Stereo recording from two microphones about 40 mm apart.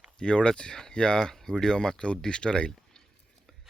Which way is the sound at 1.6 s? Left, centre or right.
Centre.